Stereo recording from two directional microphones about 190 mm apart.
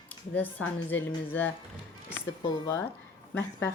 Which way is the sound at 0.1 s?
10° left (ahead or behind).